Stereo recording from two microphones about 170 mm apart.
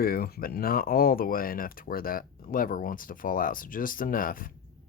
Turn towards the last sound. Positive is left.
turn(degrees=55)  # may be behind; listen again after turning